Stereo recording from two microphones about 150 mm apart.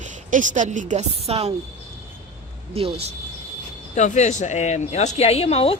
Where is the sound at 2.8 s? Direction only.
40° right (ahead or behind).